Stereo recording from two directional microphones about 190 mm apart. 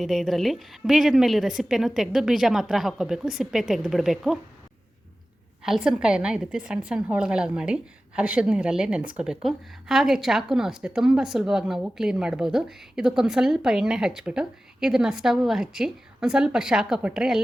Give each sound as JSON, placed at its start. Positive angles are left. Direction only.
{"t": 0.0, "sound": "a woman's voice", "side_deg": 0}
{"t": 5.6, "sound": "a woman's voice", "side_deg": -5}